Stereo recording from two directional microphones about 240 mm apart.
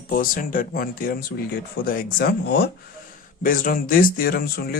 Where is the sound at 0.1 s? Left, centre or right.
Left.